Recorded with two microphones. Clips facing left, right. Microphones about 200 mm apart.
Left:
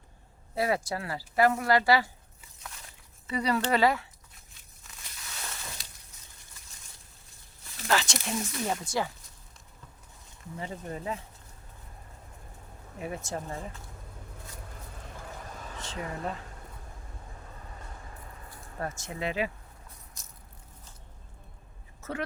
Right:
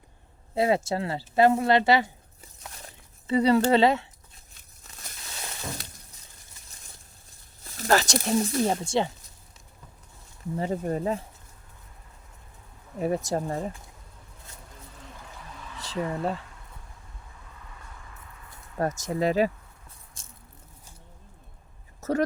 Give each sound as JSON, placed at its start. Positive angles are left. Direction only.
{"t": 0.5, "sound": "speech", "side_deg": -25}
{"t": 2.4, "sound": "a sound", "side_deg": -40}
{"t": 3.2, "sound": "speech", "side_deg": -25}
{"t": 5.8, "sound": "shatter", "side_deg": -55}
{"t": 7.8, "sound": "speech", "side_deg": -40}
{"t": 10.6, "sound": "speech", "side_deg": -40}
{"t": 13.0, "sound": "speech", "side_deg": -40}
{"t": 15.3, "sound": "vehicle", "side_deg": 45}
{"t": 15.8, "sound": "speech", "side_deg": -35}
{"t": 17.5, "sound": "vehicle", "side_deg": 35}
{"t": 18.8, "sound": "speech", "side_deg": -40}
{"t": 20.2, "sound": "biting", "side_deg": -30}
{"t": 22.0, "sound": "a sound", "side_deg": -40}